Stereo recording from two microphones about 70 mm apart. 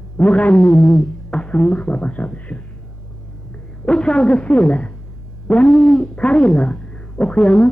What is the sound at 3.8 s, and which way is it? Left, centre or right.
Speech, centre.